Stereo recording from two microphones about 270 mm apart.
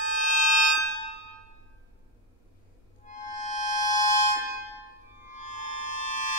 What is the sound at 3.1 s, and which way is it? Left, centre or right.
Music, left.